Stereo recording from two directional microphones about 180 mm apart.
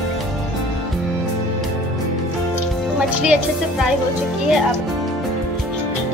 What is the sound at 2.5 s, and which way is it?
Music, 5° right (ahead or behind).